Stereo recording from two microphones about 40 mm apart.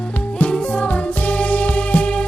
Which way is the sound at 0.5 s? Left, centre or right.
Left.